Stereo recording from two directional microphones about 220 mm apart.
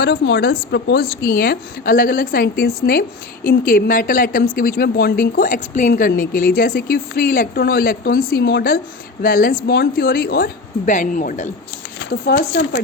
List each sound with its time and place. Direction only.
0.0 s a woman's voice: 50° left (ahead or behind)
12.4 s speech: 55° left (ahead or behind)